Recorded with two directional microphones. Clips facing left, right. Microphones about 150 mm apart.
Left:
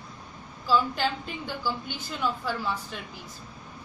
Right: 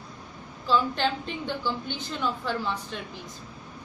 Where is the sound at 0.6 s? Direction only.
5° left (ahead or behind).